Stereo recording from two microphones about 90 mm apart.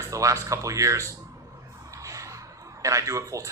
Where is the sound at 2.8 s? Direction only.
35° right (ahead or behind).